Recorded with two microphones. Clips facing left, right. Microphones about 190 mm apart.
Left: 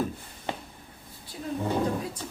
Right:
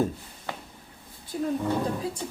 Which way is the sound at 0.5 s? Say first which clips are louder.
Left 3 dB; 25° left (ahead or behind).